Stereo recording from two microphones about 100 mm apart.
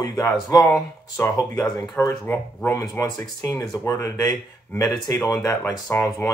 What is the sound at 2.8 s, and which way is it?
Speech, 35° left (ahead or behind).